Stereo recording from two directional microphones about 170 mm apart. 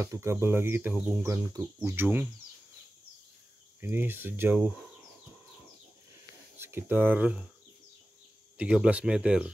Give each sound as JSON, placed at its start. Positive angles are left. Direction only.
{"t": 0.0, "sound": "speech", "side_deg": -15}
{"t": 3.8, "sound": "speech", "side_deg": -10}
{"t": 6.6, "sound": "speech", "side_deg": -15}
{"t": 8.5, "sound": "speech", "side_deg": -5}